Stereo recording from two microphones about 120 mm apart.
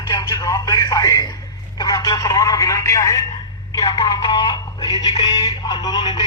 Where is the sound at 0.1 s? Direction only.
35° left (ahead or behind).